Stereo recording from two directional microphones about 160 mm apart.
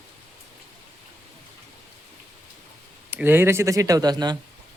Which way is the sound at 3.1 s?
15° right (ahead or behind).